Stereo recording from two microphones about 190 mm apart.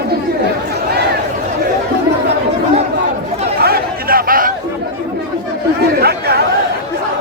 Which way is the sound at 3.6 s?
55° right (ahead or behind).